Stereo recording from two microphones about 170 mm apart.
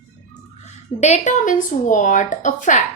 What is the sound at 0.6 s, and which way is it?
A woman's voice, 40° left (ahead or behind).